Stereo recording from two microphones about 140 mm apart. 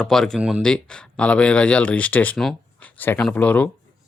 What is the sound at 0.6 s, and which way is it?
Speech, 5° left (ahead or behind).